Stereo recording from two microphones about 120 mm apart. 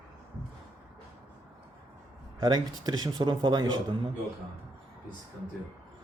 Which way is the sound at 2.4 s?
35° right (ahead or behind).